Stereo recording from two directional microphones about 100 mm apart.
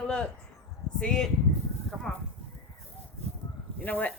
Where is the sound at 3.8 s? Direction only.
15° left (ahead or behind).